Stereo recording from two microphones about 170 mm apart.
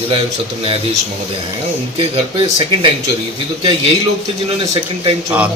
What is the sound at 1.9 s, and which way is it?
Speech, 30° right (ahead or behind).